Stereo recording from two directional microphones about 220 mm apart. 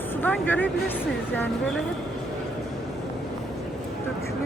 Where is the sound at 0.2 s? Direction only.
10° left (ahead or behind).